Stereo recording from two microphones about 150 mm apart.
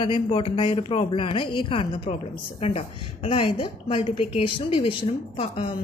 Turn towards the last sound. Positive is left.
turn(degrees=40)  # may be behind; listen again after turning